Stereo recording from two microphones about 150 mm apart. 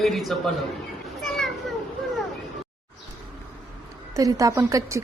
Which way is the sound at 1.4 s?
Centre (ahead or behind).